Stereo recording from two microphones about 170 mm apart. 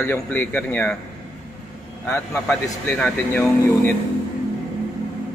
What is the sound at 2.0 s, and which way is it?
A man's voice, 15° left (ahead or behind).